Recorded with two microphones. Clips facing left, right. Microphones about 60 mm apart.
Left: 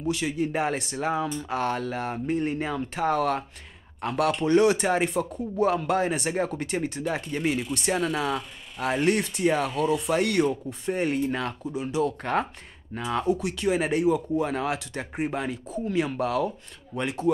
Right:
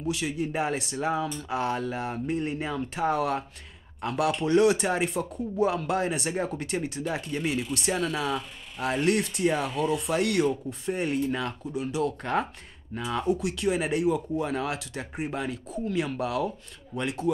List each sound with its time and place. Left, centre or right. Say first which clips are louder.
0.1 s speech: left 3 dB; centre
1.5 s speech: even; centre
12.9 s speech: left 2 dB; centre
13.2 s speech: even; centre